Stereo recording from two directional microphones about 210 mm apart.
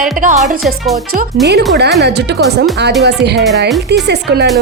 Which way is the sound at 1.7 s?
50° right (ahead or behind).